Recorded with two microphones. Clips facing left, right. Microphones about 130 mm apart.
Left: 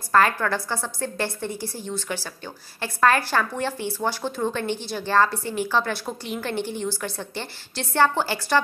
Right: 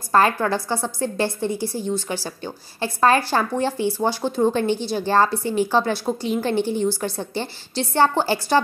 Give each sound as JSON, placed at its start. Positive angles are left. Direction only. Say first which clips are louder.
{"t": 0.1, "sound": "a woman's voice", "louder": "right 2 dB", "side_deg": -30}